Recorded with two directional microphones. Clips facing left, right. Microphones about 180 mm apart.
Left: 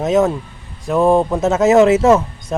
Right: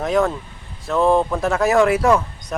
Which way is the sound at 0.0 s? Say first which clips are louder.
Left 4 dB; 20° left (ahead or behind).